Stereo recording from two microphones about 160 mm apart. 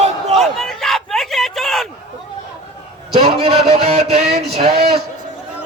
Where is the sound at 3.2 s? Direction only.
40° right (ahead or behind).